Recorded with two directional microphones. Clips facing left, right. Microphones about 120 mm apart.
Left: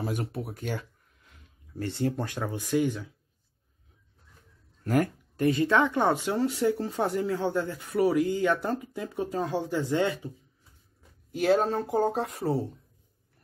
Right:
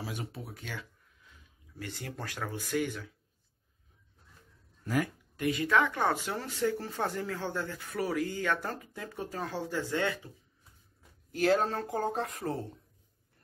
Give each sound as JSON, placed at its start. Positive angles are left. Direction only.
{"t": 0.0, "sound": "speech", "side_deg": 55}
{"t": 1.8, "sound": "speech", "side_deg": 30}
{"t": 4.8, "sound": "speech", "side_deg": 50}
{"t": 11.4, "sound": "speech", "side_deg": 5}